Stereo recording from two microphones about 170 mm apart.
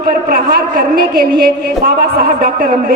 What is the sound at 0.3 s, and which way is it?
A man's voice, 60° right (ahead or behind).